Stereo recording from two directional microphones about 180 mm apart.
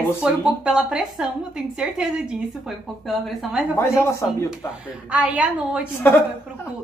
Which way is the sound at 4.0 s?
15° left (ahead or behind).